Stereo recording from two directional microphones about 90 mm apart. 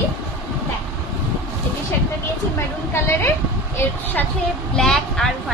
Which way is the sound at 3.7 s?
20° left (ahead or behind).